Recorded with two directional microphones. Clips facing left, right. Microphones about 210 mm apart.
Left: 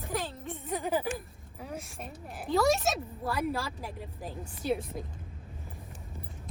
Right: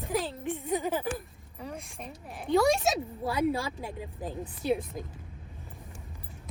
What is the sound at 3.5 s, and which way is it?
Speech, 15° right (ahead or behind).